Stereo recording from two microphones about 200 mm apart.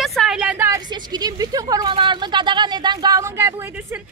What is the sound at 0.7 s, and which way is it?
A woman's voice, 20° right (ahead or behind).